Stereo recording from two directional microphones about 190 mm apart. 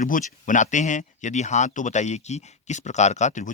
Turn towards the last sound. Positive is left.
turn(degrees=40)  # may be behind; listen again after turning